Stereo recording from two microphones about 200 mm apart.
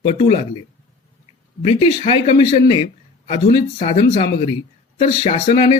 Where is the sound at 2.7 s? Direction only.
30° left (ahead or behind).